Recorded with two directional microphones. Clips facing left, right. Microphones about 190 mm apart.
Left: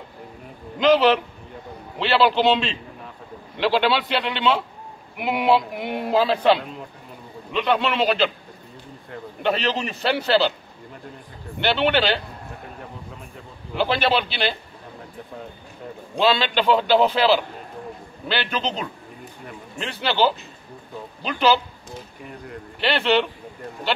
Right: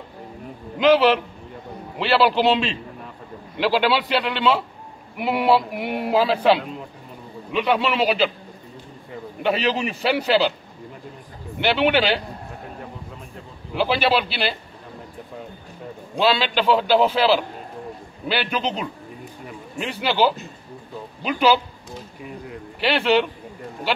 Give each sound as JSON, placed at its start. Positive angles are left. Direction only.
{"t": 0.7, "sound": "a man's voice", "side_deg": -5}
{"t": 11.6, "sound": "a man's voice", "side_deg": -10}
{"t": 13.7, "sound": "speech", "side_deg": -5}
{"t": 16.2, "sound": "a man's voice", "side_deg": -5}